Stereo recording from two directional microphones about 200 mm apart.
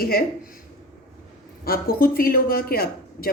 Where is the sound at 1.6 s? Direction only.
45° left (ahead or behind).